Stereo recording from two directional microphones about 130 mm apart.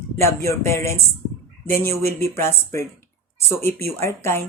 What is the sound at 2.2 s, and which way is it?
Speech, 20° left (ahead or behind).